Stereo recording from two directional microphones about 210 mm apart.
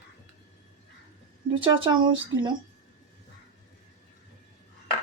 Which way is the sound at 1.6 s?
25° right (ahead or behind).